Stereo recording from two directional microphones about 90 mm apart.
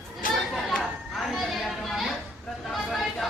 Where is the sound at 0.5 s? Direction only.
5° left (ahead or behind).